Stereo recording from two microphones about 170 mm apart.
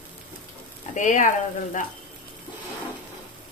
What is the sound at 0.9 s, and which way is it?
Speech, 45° left (ahead or behind).